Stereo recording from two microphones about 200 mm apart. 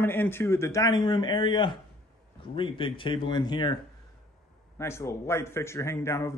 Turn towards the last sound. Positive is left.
turn(degrees=15)  # may be behind; listen again after turning